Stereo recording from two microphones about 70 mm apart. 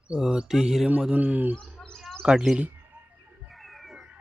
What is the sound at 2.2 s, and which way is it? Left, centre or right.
Speech, centre.